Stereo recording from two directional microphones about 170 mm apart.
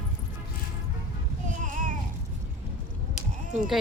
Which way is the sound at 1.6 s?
50° right (ahead or behind).